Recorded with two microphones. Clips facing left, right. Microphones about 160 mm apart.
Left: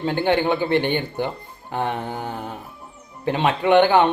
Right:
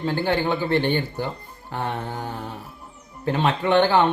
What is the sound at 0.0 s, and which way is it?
Speech, 20° left (ahead or behind).